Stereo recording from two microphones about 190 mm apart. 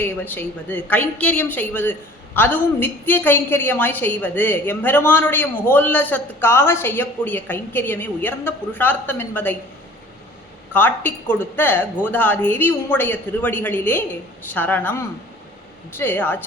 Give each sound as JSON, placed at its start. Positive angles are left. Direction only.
{"t": 0.0, "sound": "a woman's voice", "side_deg": 10}
{"t": 10.7, "sound": "a woman's voice", "side_deg": 10}